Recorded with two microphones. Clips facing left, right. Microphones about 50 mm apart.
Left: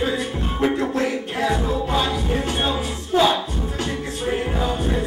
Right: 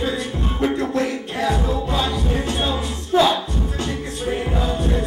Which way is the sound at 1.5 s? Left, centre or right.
Centre.